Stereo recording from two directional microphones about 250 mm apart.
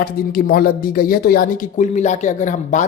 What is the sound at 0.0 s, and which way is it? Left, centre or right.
Speech, left.